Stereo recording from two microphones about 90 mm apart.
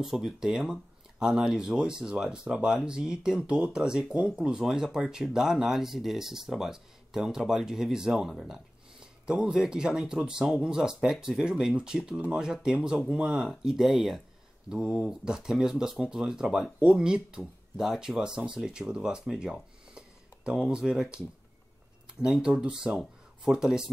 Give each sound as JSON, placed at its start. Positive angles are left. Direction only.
{"t": 0.0, "sound": "speech", "side_deg": -5}
{"t": 22.2, "sound": "speech", "side_deg": -10}